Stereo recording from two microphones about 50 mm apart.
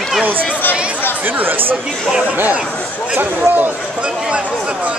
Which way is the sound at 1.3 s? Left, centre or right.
Right.